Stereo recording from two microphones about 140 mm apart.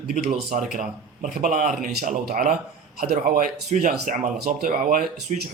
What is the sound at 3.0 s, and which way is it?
Speech, 90° right.